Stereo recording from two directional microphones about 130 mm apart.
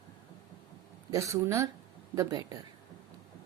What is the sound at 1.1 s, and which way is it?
Speech, 20° right (ahead or behind).